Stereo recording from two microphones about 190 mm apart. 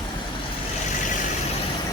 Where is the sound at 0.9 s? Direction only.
40° left (ahead or behind).